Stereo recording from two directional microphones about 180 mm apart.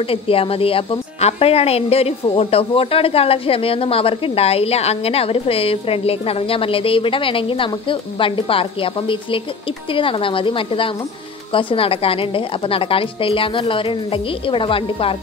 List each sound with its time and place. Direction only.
0.0 s a woman's voice: 30° left (ahead or behind)